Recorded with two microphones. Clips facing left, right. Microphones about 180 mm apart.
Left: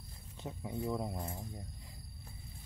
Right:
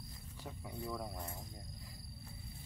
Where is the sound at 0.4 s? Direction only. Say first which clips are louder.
Left 6 dB; 20° left (ahead or behind).